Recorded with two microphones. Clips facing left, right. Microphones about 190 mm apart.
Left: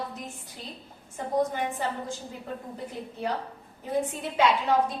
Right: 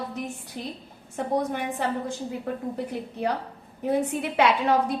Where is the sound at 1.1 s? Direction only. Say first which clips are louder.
Right 1 dB; 70° right (ahead or behind).